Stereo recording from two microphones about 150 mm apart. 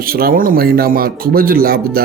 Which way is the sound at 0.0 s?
80° right.